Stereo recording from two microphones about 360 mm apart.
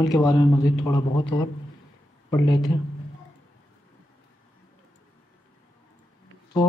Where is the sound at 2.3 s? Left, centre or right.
Centre.